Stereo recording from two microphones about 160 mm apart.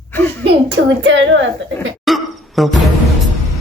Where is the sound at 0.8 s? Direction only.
90° right.